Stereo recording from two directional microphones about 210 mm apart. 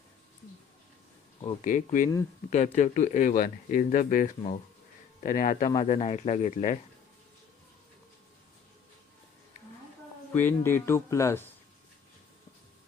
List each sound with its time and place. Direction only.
1.6 s speech: 40° left (ahead or behind)
10.3 s speech: 10° left (ahead or behind)